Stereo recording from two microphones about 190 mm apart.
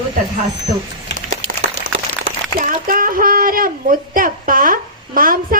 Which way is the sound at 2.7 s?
45° right (ahead or behind).